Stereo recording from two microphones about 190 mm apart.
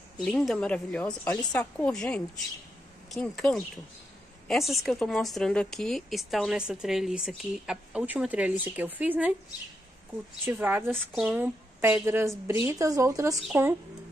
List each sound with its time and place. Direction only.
0.2 s a woman's voice: centre (ahead or behind)
10.4 s a woman's voice: 10° right (ahead or behind)